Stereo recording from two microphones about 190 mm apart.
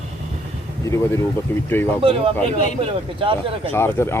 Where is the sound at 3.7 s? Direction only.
15° left (ahead or behind).